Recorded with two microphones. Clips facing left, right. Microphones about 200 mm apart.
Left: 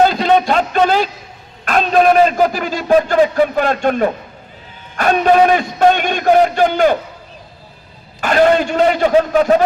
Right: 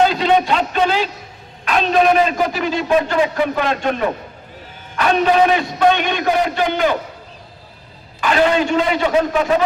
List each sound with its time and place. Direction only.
0.0 s a sound: 40° left (ahead or behind)
1.6 s a man's voice: 45° left (ahead or behind)
8.2 s a man's voice: 45° left (ahead or behind)